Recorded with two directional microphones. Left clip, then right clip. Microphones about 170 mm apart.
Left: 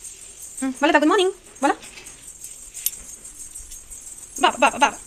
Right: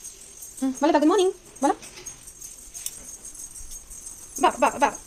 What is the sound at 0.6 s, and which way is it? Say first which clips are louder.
Speech: left 3 dB; 5° right (ahead or behind).